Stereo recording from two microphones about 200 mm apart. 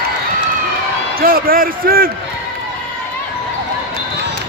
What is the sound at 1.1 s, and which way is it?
Speech, 45° right (ahead or behind).